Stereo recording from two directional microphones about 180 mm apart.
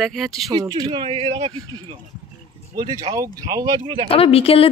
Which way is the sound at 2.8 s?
20° right (ahead or behind).